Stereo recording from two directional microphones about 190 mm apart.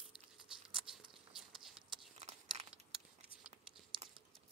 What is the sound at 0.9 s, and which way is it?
Patter, centre (ahead or behind).